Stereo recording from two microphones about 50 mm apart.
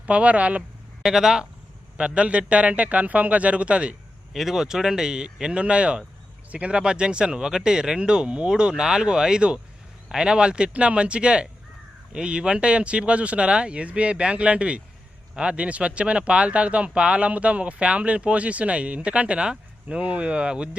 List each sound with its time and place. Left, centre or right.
0.0 s speech: right
1.0 s speech: centre
2.0 s speech: right
4.3 s speech: centre; by 20.7 s right